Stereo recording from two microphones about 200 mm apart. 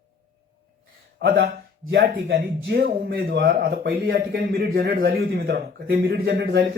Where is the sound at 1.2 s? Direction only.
50° right (ahead or behind).